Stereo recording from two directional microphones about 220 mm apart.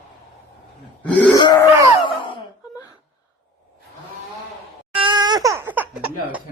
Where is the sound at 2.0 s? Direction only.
20° left (ahead or behind).